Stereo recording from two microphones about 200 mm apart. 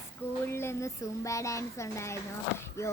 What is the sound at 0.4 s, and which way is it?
Speech, 15° left (ahead or behind).